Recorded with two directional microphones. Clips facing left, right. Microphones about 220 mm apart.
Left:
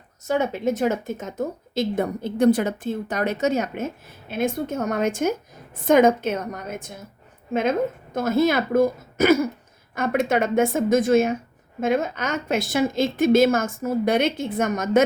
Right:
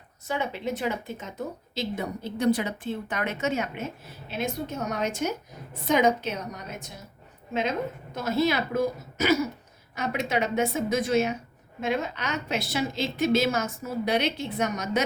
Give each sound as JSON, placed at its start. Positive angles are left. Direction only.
{"t": 0.3, "sound": "speech", "side_deg": 45}